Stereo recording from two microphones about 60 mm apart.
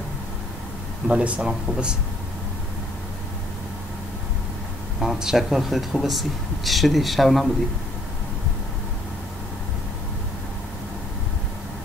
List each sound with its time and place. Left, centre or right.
1.0 s speech: centre
5.0 s speech: centre